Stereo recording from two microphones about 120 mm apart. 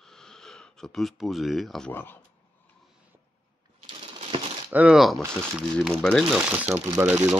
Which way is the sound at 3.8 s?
45° right (ahead or behind).